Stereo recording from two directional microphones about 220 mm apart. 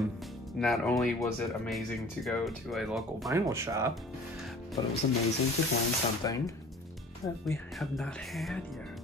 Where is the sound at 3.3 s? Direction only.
15° right (ahead or behind).